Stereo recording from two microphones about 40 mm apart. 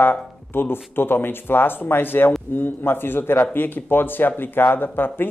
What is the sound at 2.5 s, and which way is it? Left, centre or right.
Speech, left.